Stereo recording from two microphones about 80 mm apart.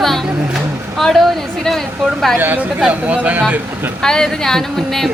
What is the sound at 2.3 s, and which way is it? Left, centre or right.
Speech, right.